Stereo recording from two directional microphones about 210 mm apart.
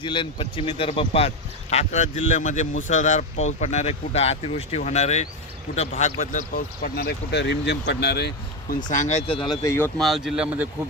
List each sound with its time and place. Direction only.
0.0 s speech: 25° left (ahead or behind)
10.0 s speech: centre (ahead or behind)